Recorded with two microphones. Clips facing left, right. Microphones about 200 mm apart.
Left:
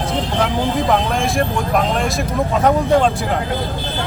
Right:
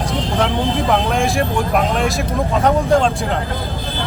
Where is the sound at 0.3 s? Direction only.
Centre (ahead or behind).